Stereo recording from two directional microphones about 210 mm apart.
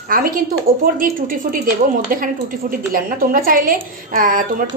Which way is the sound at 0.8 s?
40° right (ahead or behind).